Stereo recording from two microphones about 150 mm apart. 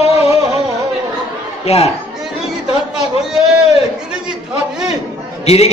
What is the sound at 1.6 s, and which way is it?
Speech, 45° left (ahead or behind).